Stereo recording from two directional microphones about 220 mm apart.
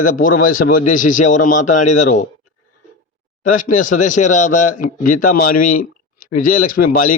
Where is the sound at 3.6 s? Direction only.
35° left (ahead or behind).